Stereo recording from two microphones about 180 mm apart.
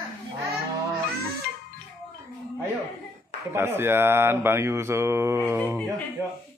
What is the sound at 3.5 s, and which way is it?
Speech, 15° right (ahead or behind).